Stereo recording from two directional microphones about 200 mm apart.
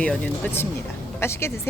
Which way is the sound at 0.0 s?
5° left (ahead or behind).